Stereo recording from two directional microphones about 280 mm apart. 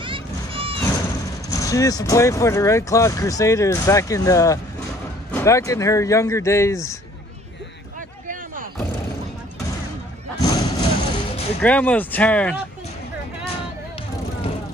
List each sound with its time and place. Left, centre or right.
0.0 s a sound: centre
1.5 s speech: centre
10.4 s vehicle: centre
11.6 s speech: centre